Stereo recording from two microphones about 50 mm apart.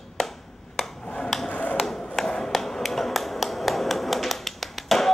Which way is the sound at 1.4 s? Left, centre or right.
Left.